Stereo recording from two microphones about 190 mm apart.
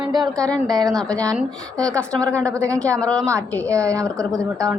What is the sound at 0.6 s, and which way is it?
Speech, 20° right (ahead or behind).